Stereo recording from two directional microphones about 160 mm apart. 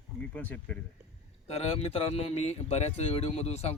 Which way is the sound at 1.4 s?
40° left (ahead or behind).